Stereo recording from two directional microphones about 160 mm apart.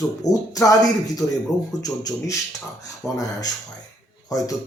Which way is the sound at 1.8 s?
20° left (ahead or behind).